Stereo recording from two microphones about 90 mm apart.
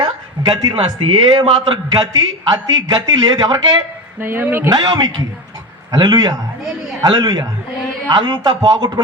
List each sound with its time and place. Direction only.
0.5 s speech: 55° right (ahead or behind)
1.3 s a man's voice: 80° right
2.0 s speech: 50° right (ahead or behind)
4.2 s speech: 25° right (ahead or behind)
4.7 s speech: 50° right (ahead or behind)